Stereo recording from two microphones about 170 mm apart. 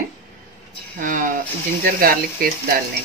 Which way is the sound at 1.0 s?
50° right (ahead or behind).